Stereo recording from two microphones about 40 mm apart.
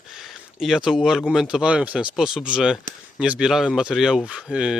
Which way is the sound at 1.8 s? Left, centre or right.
Right.